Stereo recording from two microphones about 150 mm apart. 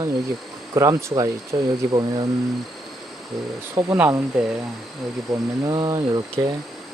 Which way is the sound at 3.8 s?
20° right (ahead or behind).